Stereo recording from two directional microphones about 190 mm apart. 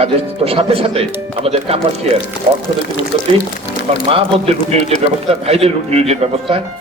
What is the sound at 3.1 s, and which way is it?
A man's voice, 30° right (ahead or behind).